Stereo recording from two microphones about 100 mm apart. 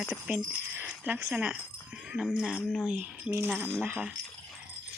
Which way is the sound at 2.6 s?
5° right (ahead or behind).